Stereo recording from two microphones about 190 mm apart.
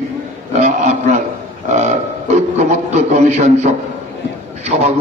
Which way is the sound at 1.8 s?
35° right (ahead or behind).